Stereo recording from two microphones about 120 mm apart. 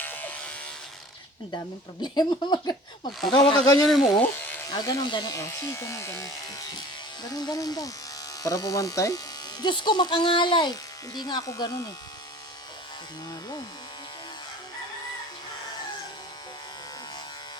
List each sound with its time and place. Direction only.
0.0 s electric shaver: 15° left (ahead or behind)
1.5 s speech: 35° left (ahead or behind)
3.2 s speech: 5° left (ahead or behind)
4.2 s speech: 15° left (ahead or behind)
4.7 s speech: 30° left (ahead or behind)
5.3 s speech: 25° left (ahead or behind)